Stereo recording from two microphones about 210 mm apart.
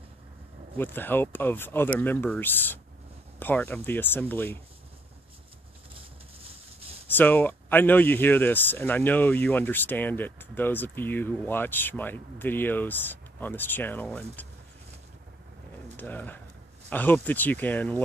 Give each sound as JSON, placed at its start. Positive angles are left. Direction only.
{"t": 0.7, "sound": "speech", "side_deg": 10}
{"t": 6.4, "sound": "a sound", "side_deg": -30}
{"t": 7.2, "sound": "speech", "side_deg": 10}
{"t": 16.0, "sound": "speech", "side_deg": 10}